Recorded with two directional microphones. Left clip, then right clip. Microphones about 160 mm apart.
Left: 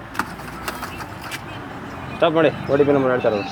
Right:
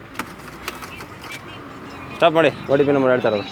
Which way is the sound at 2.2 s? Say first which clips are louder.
Right 2 dB; 65° right (ahead or behind).